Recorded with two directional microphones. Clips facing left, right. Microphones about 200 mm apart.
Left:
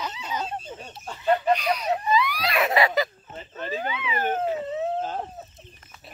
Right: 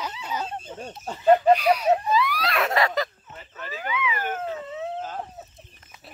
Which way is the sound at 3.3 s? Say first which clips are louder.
Left 6 dB; 25° left (ahead or behind).